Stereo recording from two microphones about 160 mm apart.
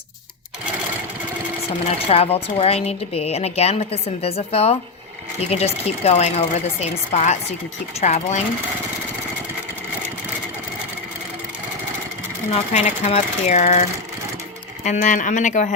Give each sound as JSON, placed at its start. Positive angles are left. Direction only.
{"t": 2.0, "sound": "speech", "side_deg": 40}
{"t": 12.5, "sound": "speech", "side_deg": 40}
{"t": 14.8, "sound": "speech", "side_deg": 55}